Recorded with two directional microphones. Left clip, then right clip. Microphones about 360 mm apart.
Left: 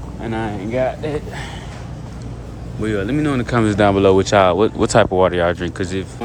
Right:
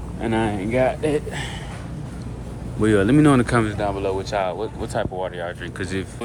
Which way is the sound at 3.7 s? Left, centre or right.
Centre.